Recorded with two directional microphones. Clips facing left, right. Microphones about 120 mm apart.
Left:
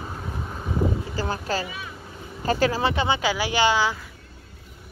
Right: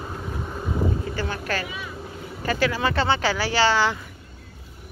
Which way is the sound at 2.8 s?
15° left (ahead or behind).